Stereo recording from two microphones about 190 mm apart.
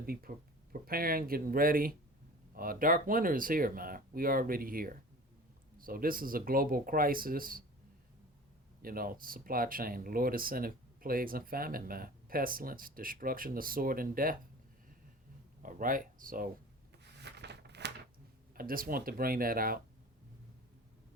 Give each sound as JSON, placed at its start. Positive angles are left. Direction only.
{"t": 0.0, "sound": "speech", "side_deg": -50}
{"t": 8.8, "sound": "speech", "side_deg": -50}
{"t": 15.6, "sound": "speech", "side_deg": -45}
{"t": 17.0, "sound": "a sound", "side_deg": -60}
{"t": 18.5, "sound": "speech", "side_deg": -50}